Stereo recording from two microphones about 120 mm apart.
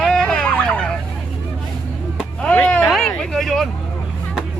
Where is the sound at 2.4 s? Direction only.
10° left (ahead or behind).